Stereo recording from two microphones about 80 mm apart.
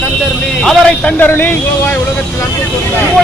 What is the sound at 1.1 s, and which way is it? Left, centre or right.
Speech, left.